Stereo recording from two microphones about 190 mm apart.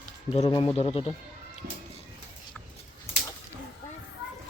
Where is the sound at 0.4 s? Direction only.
25° left (ahead or behind).